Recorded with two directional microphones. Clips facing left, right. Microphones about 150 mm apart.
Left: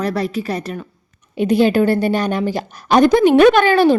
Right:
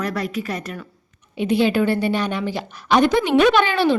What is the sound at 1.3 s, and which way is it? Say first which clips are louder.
A woman's voice: left 4 dB; 45° left (ahead or behind).